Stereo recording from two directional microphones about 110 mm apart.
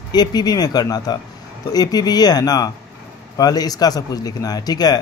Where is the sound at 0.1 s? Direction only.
40° left (ahead or behind).